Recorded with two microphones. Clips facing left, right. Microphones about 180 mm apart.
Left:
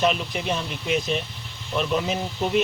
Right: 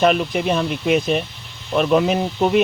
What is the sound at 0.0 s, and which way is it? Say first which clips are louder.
Speech: right 7 dB; 60° right (ahead or behind).